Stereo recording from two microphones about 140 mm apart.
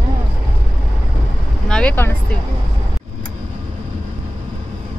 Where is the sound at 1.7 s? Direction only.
10° left (ahead or behind).